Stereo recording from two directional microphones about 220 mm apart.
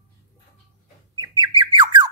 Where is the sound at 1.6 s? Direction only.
20° right (ahead or behind).